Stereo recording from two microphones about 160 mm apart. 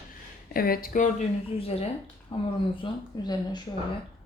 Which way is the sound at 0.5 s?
65° left (ahead or behind).